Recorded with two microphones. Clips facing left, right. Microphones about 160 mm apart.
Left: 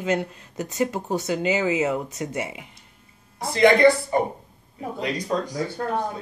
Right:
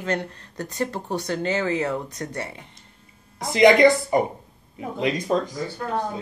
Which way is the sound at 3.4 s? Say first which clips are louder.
Right 1 dB; 15° right (ahead or behind).